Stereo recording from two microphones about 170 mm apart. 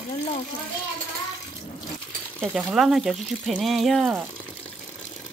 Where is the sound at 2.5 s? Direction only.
5° right (ahead or behind).